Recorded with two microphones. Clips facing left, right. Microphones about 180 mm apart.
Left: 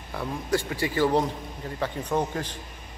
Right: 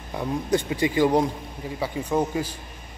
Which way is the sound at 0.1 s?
20° right (ahead or behind).